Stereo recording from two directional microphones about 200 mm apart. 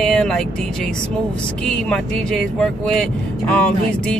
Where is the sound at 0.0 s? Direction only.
5° left (ahead or behind).